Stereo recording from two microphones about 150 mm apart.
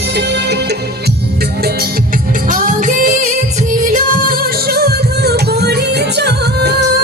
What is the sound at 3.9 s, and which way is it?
Music, 70° right (ahead or behind).